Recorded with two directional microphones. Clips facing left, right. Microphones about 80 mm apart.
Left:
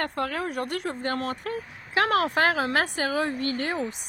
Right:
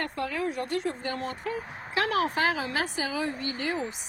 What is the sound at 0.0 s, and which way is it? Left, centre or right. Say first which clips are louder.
Speech: left 2 dB; left.